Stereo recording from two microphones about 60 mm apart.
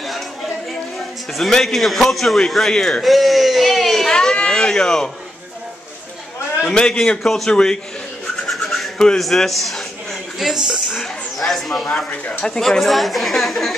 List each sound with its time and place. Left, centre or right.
1.3 s a man's voice: centre
6.7 s a man's voice: centre
8.5 s rub: centre
9.2 s a man's voice: centre
12.1 s speech: centre
12.5 s a man's voice: centre